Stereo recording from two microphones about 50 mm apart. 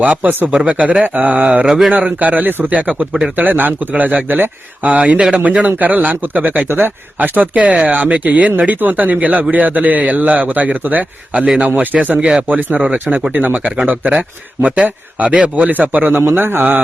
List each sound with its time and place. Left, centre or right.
0.0 s speech: right
0.5 s speech: right
1.6 s speech: centre
1.9 s a man's voice: right
4.9 s a man's voice: right
6.7 s speech: right
7.2 s a man's voice: right
12.2 s a man's voice: right
13.3 s a man's voice: right
16.2 s speech: right